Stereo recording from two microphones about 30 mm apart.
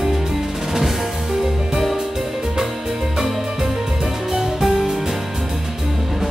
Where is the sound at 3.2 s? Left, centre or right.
Centre.